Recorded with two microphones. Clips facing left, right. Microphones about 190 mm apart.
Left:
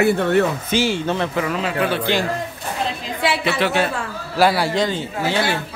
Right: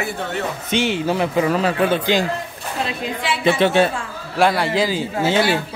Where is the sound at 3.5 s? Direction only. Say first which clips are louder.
Right 7 dB; 25° right (ahead or behind).